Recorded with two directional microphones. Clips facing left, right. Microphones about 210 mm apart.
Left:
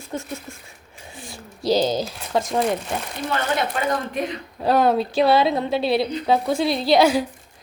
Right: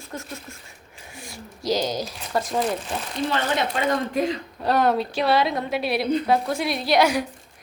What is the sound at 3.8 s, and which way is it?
Speech, 25° right (ahead or behind).